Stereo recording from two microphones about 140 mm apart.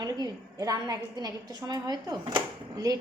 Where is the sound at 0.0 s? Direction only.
30° right (ahead or behind).